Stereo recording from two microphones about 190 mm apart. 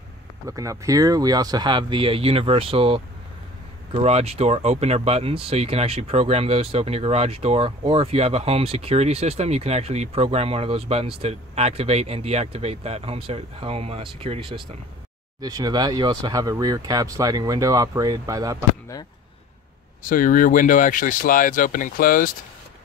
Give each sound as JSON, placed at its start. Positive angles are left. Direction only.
{"t": 0.5, "sound": "speech", "side_deg": -15}
{"t": 20.1, "sound": "speech", "side_deg": 45}